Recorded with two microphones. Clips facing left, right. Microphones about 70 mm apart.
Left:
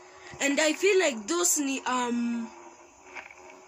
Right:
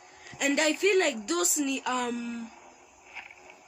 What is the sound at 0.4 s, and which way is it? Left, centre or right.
Speech, centre.